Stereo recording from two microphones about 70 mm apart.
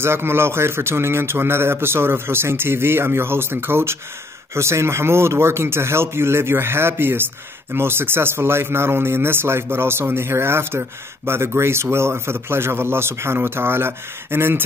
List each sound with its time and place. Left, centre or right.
0.0 s speech: right